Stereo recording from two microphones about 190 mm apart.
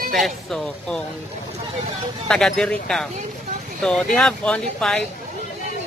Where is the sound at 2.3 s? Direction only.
5° left (ahead or behind).